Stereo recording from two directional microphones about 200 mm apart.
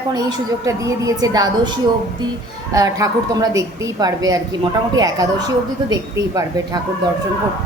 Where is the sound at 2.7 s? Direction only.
15° right (ahead or behind).